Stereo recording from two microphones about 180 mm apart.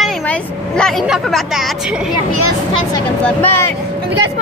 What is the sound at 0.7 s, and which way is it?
Speech, centre (ahead or behind).